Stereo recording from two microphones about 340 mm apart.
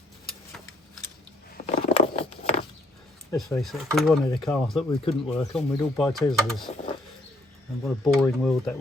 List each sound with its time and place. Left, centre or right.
1.9 s patter: centre
3.3 s speech: centre
8.0 s speech: centre